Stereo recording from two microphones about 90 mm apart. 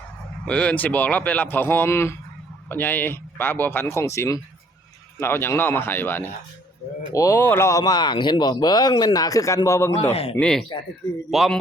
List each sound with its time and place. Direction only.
0.4 s speech: 15° left (ahead or behind)
7.1 s speech: 40° left (ahead or behind)
7.4 s speech: 25° left (ahead or behind)
7.7 s speech: 40° left (ahead or behind)
10.4 s a man's voice: 5° left (ahead or behind)